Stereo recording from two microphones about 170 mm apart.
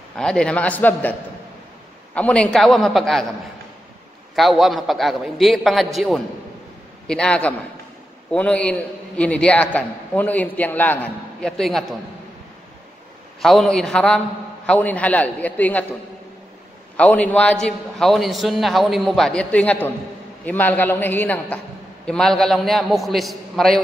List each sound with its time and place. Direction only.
0.1 s a man's voice: 5° left (ahead or behind)
2.1 s a man's voice: 5° left (ahead or behind)
4.4 s a man's voice: centre (ahead or behind)
13.4 s a man's voice: centre (ahead or behind)
16.9 s a man's voice: 10° left (ahead or behind)